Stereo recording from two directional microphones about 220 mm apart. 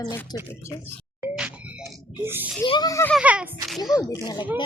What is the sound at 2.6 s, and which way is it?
Speech, 20° left (ahead or behind).